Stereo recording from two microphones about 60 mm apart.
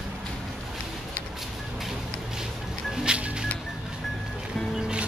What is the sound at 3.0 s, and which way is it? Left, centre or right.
Music, centre.